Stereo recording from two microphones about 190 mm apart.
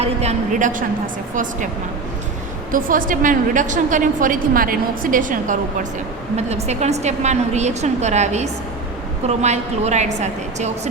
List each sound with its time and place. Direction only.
0.0 s a woman's voice: 35° right (ahead or behind)
2.7 s a woman's voice: 45° right (ahead or behind)